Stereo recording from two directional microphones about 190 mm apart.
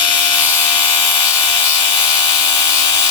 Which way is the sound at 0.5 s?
25° left (ahead or behind).